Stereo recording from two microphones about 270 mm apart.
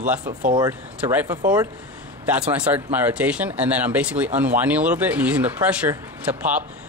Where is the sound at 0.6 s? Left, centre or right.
Centre.